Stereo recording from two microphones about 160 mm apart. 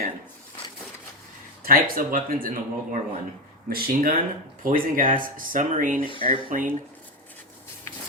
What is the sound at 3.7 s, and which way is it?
A man's voice, 65° right (ahead or behind).